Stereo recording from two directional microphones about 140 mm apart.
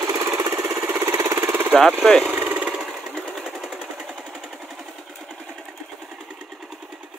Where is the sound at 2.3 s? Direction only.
15° right (ahead or behind).